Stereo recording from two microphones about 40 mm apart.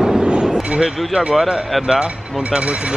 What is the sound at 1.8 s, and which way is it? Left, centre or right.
Speech, centre.